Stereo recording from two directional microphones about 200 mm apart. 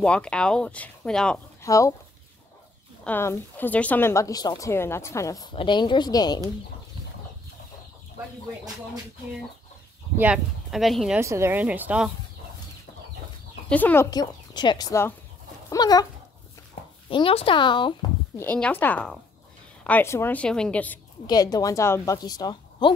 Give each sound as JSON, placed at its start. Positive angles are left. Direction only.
{"t": 0.0, "sound": "speech", "side_deg": 5}
{"t": 1.6, "sound": "speech", "side_deg": 15}
{"t": 3.0, "sound": "speech", "side_deg": 10}
{"t": 10.1, "sound": "speech", "side_deg": -5}
{"t": 11.1, "sound": "a woman's voice", "side_deg": -15}
{"t": 13.7, "sound": "speech", "side_deg": 10}
{"t": 14.1, "sound": "a woman's voice", "side_deg": 20}
{"t": 17.1, "sound": "a woman's voice", "side_deg": 25}
{"t": 18.4, "sound": "speech", "side_deg": 5}
{"t": 21.3, "sound": "a woman's voice", "side_deg": 20}